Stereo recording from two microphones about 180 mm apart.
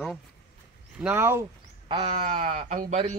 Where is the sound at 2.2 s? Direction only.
45° right (ahead or behind).